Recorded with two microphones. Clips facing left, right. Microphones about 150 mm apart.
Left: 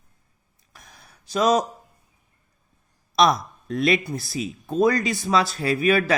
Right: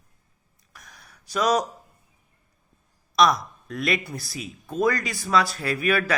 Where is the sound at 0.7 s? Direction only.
25° left (ahead or behind).